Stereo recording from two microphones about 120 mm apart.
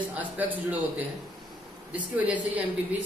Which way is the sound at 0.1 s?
15° right (ahead or behind).